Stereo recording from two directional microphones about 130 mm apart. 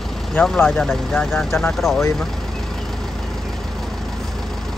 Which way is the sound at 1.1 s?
15° left (ahead or behind).